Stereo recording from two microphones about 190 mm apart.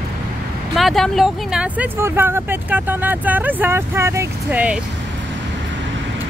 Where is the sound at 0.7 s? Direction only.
Centre (ahead or behind).